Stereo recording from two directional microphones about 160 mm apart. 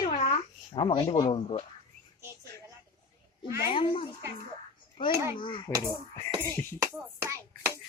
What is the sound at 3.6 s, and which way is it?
A child's voice, 30° left (ahead or behind).